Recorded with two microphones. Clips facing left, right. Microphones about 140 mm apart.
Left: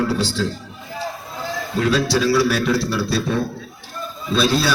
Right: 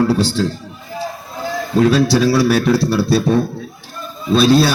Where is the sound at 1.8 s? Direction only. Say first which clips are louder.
Right 5 dB; 35° right (ahead or behind).